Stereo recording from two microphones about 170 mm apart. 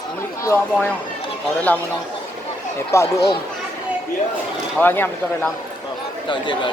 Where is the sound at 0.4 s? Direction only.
15° left (ahead or behind).